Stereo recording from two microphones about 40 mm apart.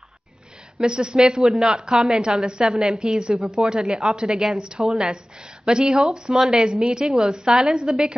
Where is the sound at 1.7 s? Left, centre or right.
Right.